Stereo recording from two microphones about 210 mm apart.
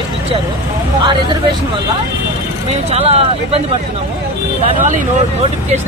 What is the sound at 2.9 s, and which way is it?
Speech, 30° right (ahead or behind).